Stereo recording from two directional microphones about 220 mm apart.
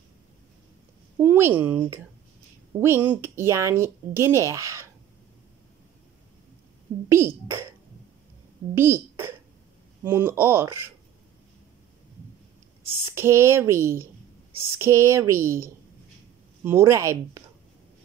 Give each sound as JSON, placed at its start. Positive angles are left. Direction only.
{"t": 1.2, "sound": "speech", "side_deg": -10}
{"t": 2.8, "sound": "speech", "side_deg": -10}
{"t": 7.1, "sound": "speech", "side_deg": -10}
{"t": 8.7, "sound": "speech", "side_deg": -10}
{"t": 13.0, "sound": "speech", "side_deg": -10}